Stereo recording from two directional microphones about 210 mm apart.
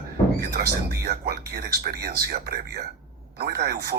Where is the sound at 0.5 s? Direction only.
50° right (ahead or behind).